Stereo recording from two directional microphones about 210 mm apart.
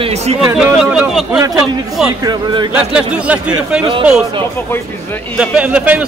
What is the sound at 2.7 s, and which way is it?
Speech, 5° right (ahead or behind).